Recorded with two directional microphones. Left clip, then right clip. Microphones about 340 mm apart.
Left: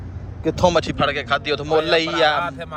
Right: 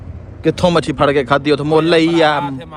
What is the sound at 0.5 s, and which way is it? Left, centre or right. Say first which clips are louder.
A man's voice: right 2 dB; right.